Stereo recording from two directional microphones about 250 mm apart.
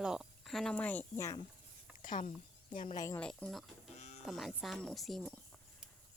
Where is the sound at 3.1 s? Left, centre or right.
Centre.